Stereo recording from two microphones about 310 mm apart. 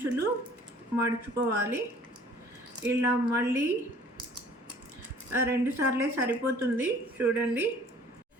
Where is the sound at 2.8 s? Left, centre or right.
Centre.